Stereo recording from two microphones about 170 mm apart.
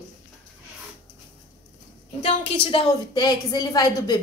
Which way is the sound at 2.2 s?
30° left (ahead or behind).